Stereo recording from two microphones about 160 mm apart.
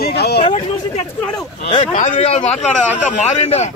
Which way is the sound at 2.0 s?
45° left (ahead or behind).